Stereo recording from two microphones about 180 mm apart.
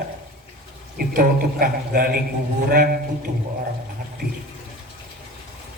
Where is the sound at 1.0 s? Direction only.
55° right (ahead or behind).